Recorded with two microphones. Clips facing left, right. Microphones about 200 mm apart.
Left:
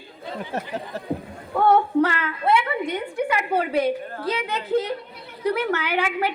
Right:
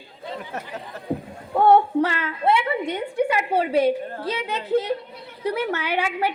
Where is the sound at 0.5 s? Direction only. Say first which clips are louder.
Left 4 dB; 30° left (ahead or behind).